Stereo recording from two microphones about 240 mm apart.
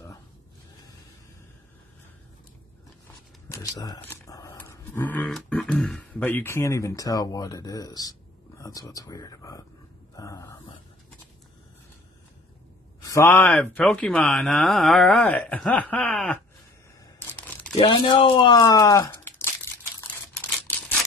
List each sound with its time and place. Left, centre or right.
3.4 s speech: centre
13.0 s speech: centre
17.3 s crumpling: centre
17.7 s speech: centre
20.1 s a sound: centre